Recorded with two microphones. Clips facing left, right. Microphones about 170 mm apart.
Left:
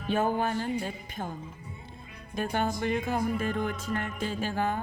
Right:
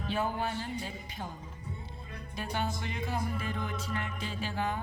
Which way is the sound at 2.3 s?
50° left (ahead or behind).